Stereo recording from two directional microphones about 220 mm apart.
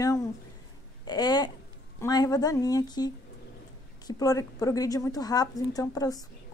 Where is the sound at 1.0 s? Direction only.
20° left (ahead or behind).